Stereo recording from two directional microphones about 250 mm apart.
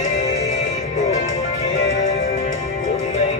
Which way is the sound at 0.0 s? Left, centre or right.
Left.